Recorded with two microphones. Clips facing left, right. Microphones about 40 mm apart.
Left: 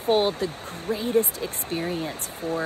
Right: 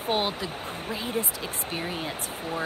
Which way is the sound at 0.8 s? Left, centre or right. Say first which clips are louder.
Left 8 dB; right.